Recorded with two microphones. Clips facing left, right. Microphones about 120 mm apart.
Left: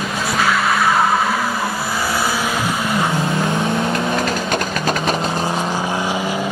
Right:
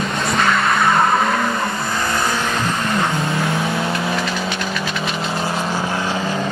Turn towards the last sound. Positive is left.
turn(degrees=10)  # may be behind; listen again after turning